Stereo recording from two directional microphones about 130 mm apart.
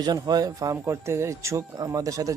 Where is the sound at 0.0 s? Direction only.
30° right (ahead or behind).